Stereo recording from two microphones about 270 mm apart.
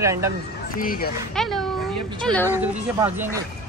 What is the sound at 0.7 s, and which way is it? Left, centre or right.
Speech, left.